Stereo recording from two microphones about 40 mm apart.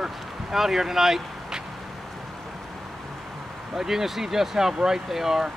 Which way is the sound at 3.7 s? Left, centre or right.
Centre.